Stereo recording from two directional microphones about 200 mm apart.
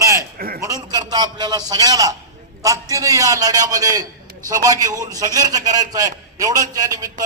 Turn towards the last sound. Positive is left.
turn(degrees=-20)  # may be behind; listen again after turning